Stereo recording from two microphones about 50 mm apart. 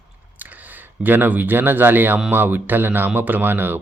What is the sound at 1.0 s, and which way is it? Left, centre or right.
Speech, right.